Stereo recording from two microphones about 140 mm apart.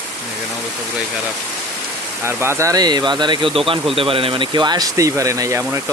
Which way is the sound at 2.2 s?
20° right (ahead or behind).